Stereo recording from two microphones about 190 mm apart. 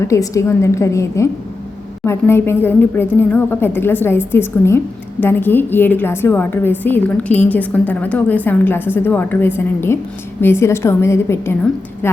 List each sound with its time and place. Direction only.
0.0 s a woman's voice: 15° left (ahead or behind)